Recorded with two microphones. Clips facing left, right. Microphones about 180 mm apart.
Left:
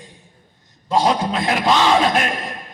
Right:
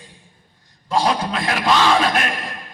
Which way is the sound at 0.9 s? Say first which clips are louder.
Left 2 dB; 20° left (ahead or behind).